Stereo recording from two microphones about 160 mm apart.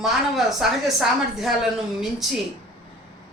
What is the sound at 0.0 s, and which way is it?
A woman's voice, centre (ahead or behind).